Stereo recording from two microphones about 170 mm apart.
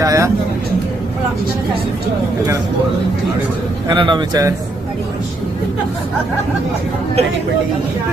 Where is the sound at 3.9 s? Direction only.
30° right (ahead or behind).